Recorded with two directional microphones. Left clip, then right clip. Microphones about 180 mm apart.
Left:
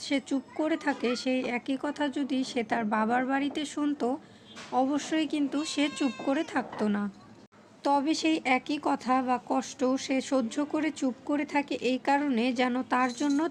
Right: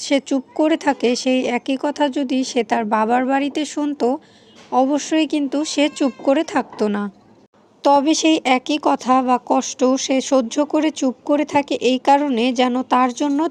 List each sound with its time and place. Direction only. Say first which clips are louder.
0.0 s speech: right 11 dB; 40° right (ahead or behind)